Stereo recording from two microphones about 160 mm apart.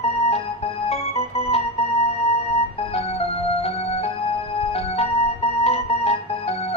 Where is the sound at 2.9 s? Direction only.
40° left (ahead or behind).